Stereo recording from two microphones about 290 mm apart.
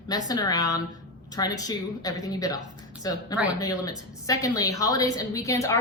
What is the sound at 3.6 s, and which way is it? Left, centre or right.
Speech, centre.